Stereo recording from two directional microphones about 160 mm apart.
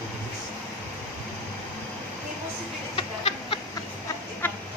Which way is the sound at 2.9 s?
35° left (ahead or behind).